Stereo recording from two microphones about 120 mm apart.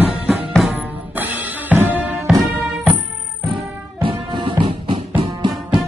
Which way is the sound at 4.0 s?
45° right (ahead or behind).